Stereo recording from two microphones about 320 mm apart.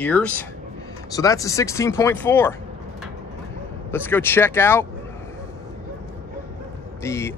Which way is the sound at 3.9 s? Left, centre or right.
Centre.